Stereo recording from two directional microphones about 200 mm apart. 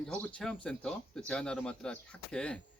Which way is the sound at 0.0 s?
5° left (ahead or behind).